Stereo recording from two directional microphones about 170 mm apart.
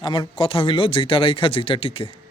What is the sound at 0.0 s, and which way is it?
Speech, 25° left (ahead or behind).